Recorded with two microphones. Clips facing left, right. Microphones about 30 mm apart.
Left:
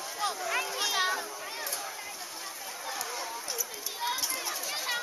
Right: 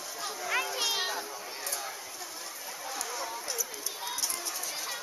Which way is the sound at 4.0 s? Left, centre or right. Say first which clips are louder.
Left 5 dB; left.